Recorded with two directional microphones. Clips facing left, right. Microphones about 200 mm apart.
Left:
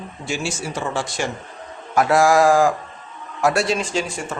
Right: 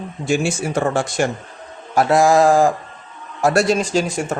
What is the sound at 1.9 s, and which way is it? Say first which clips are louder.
Speech: right 2 dB; 30° right (ahead or behind).